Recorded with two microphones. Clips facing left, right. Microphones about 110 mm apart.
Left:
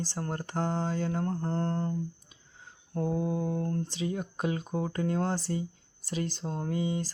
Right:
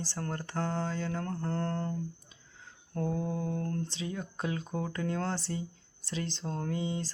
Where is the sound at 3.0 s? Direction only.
15° left (ahead or behind).